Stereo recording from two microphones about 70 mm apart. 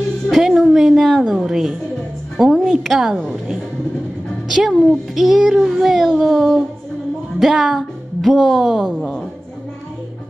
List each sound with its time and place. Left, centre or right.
0.3 s music: centre
2.6 s a woman's voice: centre
4.5 s a woman's voice: centre